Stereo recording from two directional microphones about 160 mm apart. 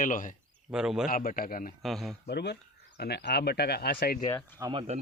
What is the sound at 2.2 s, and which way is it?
Speech, 90° left.